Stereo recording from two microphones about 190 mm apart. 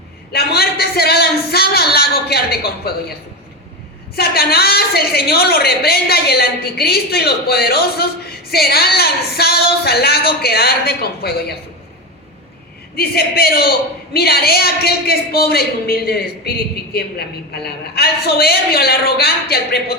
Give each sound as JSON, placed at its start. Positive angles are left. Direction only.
{"t": 0.3, "sound": "a man's voice", "side_deg": 55}
{"t": 4.1, "sound": "a woman's voice", "side_deg": 55}
{"t": 13.0, "sound": "a woman's voice", "side_deg": 55}